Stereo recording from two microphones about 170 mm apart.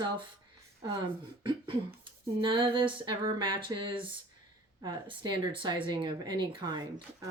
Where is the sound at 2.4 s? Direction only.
30° right (ahead or behind).